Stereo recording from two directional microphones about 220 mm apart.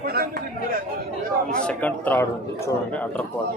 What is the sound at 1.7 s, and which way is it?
A man's voice, 5° left (ahead or behind).